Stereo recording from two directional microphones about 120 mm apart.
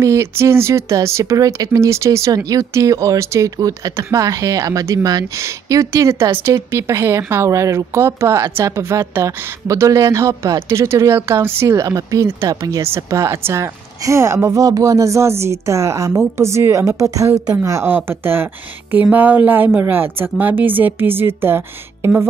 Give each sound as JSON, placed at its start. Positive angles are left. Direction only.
{"t": 0.0, "sound": "a woman's voice", "side_deg": -25}